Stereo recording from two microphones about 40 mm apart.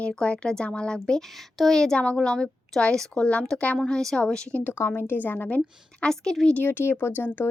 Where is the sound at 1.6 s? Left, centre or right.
Centre.